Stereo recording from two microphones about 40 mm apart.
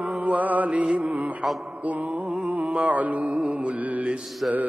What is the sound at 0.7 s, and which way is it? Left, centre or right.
Music, right.